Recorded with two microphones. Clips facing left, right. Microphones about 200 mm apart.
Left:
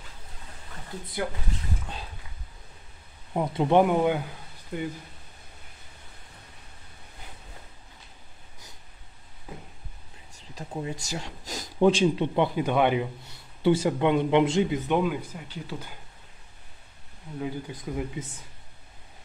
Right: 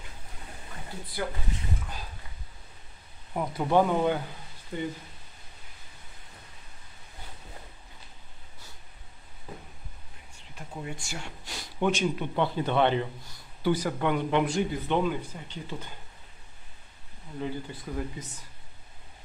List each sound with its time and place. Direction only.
3.3 s speech: 20° left (ahead or behind); by 4.9 s 5° left (ahead or behind)
10.5 s speech: 30° left (ahead or behind)
12.4 s speech: 10° left (ahead or behind)
13.6 s speech: 25° left (ahead or behind)
15.0 s speech: 5° left (ahead or behind)
17.4 s speech: 15° left (ahead or behind)